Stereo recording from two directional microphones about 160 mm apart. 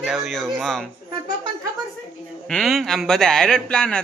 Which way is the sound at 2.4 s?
Centre (ahead or behind).